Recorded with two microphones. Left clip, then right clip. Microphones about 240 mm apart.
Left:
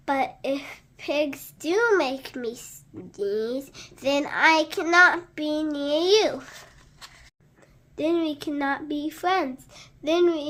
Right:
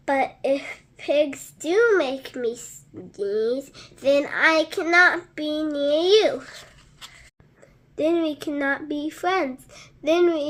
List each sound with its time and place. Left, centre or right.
0.0 s a woman's voice: centre
7.9 s a woman's voice: centre